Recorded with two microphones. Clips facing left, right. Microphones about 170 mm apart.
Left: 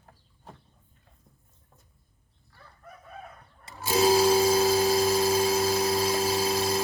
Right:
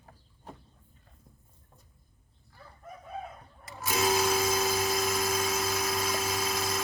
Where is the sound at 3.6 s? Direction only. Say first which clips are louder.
Left 6 dB; 30° left (ahead or behind).